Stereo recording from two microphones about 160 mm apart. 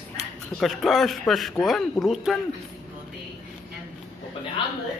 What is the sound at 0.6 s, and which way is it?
Speech, centre (ahead or behind).